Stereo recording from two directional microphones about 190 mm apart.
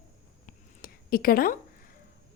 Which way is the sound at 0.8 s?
50° left (ahead or behind).